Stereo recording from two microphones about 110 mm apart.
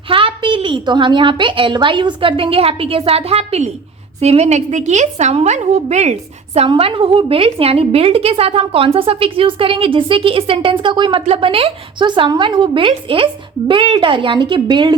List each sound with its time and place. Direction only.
0.1 s a woman's voice: 55° right (ahead or behind); by 6.7 s 80° right
6.7 s a woman's voice: 55° right (ahead or behind)
11.3 s a woman's voice: 55° right (ahead or behind)